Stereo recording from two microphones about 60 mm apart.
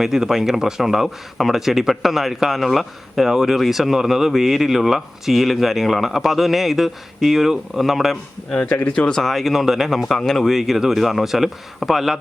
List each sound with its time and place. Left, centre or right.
0.0 s speech: centre
8.6 s speech: left
9.0 s speech: centre